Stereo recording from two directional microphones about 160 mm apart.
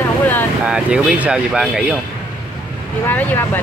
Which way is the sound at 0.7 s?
5° right (ahead or behind).